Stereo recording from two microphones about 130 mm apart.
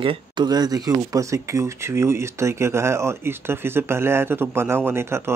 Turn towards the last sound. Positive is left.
turn(degrees=-20)  # may be behind; listen again after turning